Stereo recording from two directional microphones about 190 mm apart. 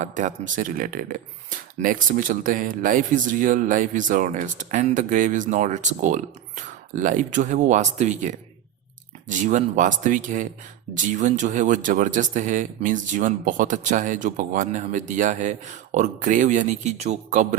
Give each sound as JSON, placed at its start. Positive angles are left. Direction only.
{"t": 0.0, "sound": "speech", "side_deg": -40}